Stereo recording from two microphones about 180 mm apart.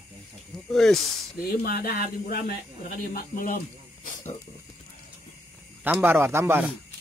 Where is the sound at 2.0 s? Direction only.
60° left (ahead or behind).